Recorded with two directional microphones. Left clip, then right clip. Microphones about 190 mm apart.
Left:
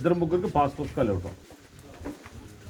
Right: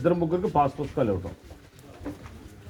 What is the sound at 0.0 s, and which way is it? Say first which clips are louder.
Speech: right 1 dB; 10° right (ahead or behind).